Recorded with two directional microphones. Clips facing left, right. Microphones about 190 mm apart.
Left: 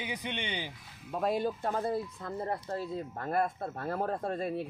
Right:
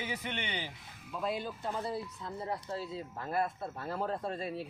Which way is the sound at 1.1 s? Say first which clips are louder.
Left 6 dB; 50° left (ahead or behind).